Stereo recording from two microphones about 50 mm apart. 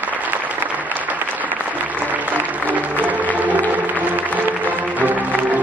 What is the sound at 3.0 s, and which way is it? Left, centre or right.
Music, right.